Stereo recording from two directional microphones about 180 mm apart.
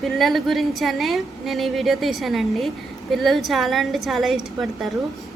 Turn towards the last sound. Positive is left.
turn(degrees=0)  # may be behind; listen again after turning